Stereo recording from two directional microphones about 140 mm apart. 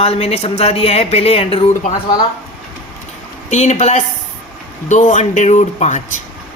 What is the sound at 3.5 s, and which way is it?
Speech, 55° left (ahead or behind).